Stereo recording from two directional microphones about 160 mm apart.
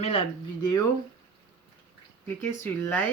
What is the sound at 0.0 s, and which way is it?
Speech, 40° left (ahead or behind).